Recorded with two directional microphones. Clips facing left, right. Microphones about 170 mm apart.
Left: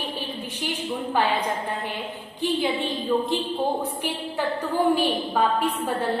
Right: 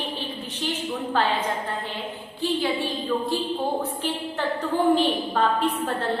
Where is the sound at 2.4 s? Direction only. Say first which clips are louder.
Even; 20° left (ahead or behind).